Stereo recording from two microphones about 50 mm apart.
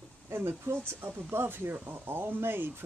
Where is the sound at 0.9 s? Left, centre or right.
Right.